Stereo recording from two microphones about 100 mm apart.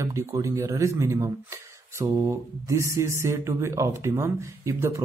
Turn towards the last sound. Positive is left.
turn(degrees=-30)  # may be behind; listen again after turning